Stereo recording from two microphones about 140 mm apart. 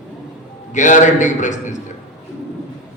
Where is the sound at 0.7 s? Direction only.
60° left (ahead or behind).